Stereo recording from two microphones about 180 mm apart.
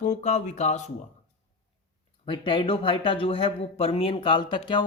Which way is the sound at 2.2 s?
25° left (ahead or behind).